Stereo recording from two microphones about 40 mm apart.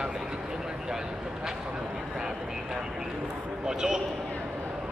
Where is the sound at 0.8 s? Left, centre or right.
Centre.